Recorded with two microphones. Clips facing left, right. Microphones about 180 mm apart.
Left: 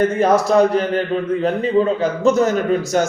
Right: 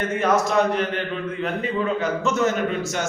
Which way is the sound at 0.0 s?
35° left (ahead or behind).